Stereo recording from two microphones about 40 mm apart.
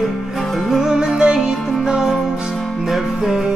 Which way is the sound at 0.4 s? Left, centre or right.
Centre.